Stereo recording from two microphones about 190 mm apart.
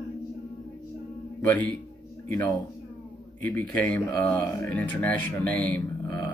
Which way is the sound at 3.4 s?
10° left (ahead or behind).